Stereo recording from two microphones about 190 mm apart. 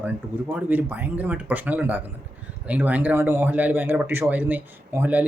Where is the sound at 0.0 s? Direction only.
10° right (ahead or behind).